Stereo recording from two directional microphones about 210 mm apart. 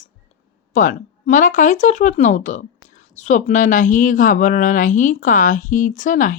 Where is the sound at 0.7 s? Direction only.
40° left (ahead or behind).